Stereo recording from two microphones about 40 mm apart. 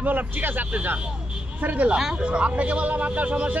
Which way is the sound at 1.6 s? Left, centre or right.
Right.